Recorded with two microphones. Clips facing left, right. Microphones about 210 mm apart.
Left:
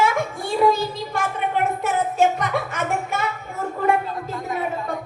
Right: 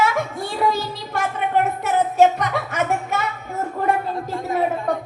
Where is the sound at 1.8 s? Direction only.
50° left (ahead or behind).